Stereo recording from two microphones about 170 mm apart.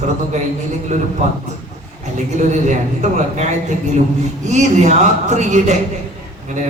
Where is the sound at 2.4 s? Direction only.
45° right (ahead or behind).